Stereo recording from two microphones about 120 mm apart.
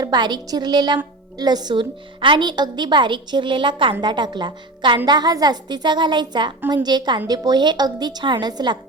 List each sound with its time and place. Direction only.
0.0 s a woman's voice: 35° right (ahead or behind)